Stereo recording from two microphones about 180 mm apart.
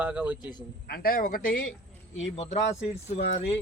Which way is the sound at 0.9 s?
55° left (ahead or behind).